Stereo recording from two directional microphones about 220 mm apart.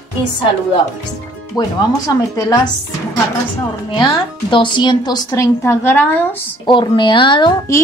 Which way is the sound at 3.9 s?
20° left (ahead or behind).